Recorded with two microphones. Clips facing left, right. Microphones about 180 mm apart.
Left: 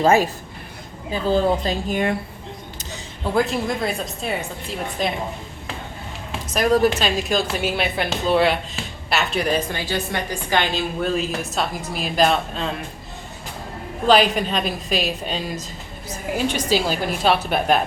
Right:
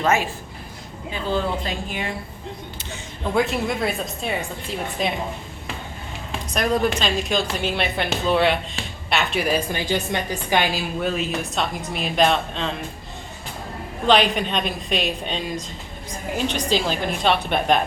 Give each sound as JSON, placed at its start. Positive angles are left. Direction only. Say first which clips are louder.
{"t": 0.0, "sound": "a woman's voice", "louder": "left 5 dB", "side_deg": 35}
{"t": 3.3, "sound": "a woman's voice", "louder": "left 1 dB", "side_deg": 0}
{"t": 6.5, "sound": "a woman's voice", "louder": "left 4 dB", "side_deg": 5}
{"t": 9.7, "sound": "a woman's voice", "louder": "right 1 dB", "side_deg": -15}
{"t": 14.1, "sound": "a woman's voice", "louder": "left 2 dB", "side_deg": 0}